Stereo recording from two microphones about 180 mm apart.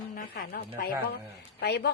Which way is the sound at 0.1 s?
50° left (ahead or behind).